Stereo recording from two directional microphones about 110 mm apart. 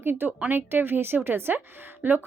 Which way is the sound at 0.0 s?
20° right (ahead or behind).